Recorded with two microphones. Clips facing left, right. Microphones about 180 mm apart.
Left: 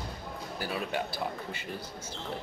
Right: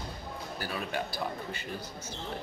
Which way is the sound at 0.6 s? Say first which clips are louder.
Left 2 dB; 25° left (ahead or behind).